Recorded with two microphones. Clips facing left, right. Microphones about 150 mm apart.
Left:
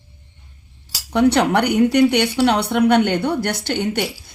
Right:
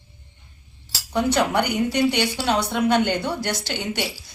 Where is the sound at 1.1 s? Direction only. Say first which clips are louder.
Left 5 dB; 70° left (ahead or behind).